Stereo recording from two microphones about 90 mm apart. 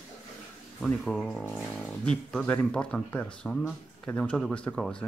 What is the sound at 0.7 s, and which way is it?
Speech, 10° left (ahead or behind).